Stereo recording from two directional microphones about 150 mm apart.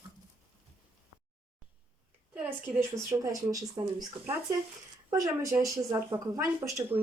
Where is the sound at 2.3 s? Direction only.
10° right (ahead or behind).